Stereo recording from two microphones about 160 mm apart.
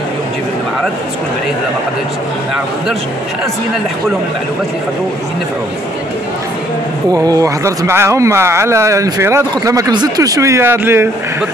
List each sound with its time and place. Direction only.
7.2 s speech: 20° right (ahead or behind)